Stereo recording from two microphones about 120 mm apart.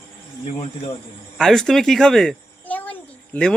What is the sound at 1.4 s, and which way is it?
Speech, 5° left (ahead or behind).